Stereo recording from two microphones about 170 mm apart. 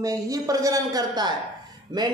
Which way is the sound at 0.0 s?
20° right (ahead or behind).